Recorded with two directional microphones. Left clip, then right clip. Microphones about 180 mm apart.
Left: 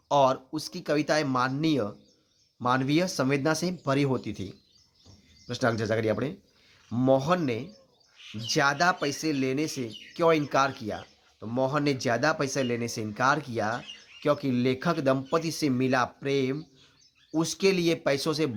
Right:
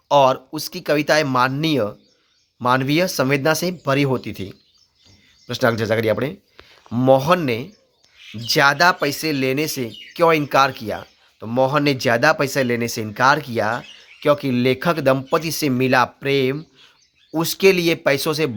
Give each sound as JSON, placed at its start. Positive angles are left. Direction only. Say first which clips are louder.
{"t": 0.1, "sound": "speech", "louder": "right 8 dB", "side_deg": -20}